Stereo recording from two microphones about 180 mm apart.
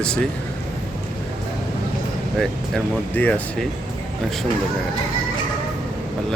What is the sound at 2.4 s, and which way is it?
Speech, 5° left (ahead or behind).